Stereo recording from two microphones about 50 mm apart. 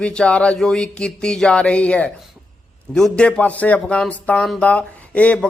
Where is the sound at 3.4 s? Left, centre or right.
Left.